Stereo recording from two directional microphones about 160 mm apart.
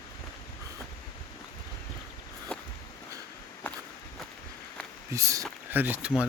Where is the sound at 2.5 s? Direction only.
5° left (ahead or behind).